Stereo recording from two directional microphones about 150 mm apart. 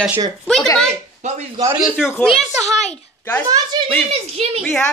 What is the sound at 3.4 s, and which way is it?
Speech, 25° right (ahead or behind).